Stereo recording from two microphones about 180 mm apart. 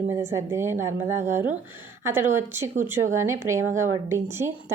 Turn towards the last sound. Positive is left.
turn(degrees=-15)  # may be behind; listen again after turning